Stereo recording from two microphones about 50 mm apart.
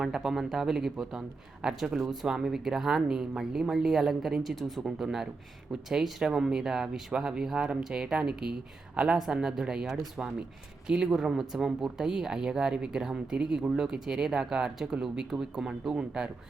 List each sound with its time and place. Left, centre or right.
0.0 s speech: centre
10.8 s speech: centre